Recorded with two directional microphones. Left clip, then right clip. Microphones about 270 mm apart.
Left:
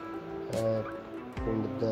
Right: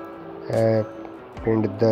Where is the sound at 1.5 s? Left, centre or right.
Right.